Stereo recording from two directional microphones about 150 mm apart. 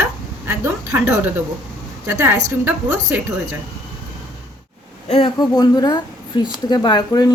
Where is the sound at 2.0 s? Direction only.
20° right (ahead or behind).